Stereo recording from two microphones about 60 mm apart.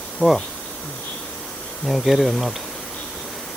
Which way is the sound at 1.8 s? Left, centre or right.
Centre.